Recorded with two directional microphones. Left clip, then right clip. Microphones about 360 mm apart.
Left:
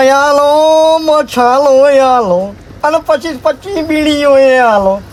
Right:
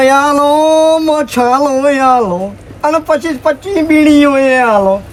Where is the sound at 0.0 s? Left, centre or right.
Left.